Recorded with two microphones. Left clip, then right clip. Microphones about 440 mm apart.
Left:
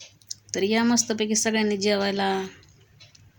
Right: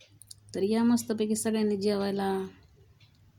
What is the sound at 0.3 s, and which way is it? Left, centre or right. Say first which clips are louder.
Speech: left 5 dB; right.